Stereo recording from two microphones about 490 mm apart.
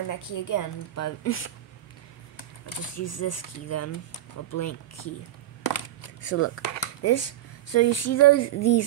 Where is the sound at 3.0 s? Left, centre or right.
Left.